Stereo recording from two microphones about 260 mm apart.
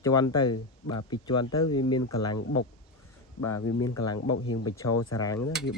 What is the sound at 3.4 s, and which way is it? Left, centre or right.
Speech, left.